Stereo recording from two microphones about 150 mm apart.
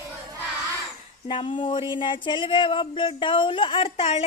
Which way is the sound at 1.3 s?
35° left (ahead or behind).